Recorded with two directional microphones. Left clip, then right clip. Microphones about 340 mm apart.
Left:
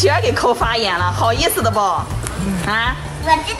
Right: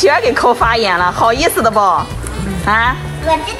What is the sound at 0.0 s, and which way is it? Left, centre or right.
Speech, centre.